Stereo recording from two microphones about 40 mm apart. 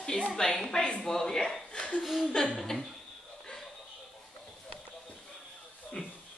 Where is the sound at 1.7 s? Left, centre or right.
Left.